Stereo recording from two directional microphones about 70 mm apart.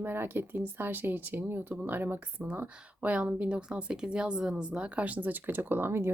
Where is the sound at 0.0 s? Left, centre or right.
Right.